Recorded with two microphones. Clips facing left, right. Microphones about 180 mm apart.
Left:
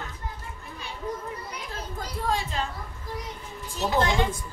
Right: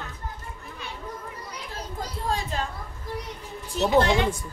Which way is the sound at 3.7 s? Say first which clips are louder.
Right 4 dB; 65° right (ahead or behind).